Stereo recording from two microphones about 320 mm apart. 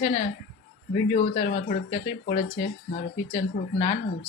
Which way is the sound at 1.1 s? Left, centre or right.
Left.